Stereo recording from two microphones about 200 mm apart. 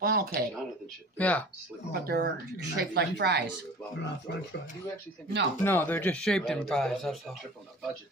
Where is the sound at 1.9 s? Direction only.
50° right (ahead or behind).